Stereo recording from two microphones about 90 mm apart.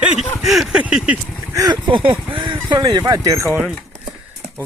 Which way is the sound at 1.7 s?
65° right (ahead or behind).